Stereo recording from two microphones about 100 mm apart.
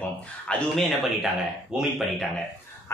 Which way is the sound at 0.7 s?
Centre (ahead or behind).